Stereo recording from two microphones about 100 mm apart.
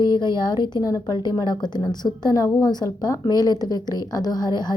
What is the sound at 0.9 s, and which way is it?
Speech, 35° left (ahead or behind).